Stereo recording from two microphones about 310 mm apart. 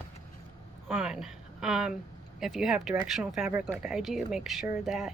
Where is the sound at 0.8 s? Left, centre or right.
Centre.